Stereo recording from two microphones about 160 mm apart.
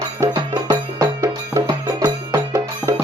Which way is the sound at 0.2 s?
25° right (ahead or behind).